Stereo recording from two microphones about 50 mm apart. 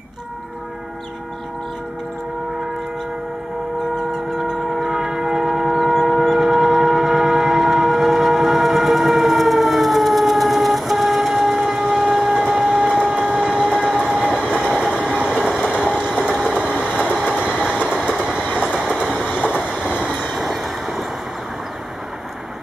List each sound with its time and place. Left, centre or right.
3.9 s train: centre
16.0 s a sound: centre
16.5 s vehicle: centre
18.0 s train: centre
20.3 s vehicle: centre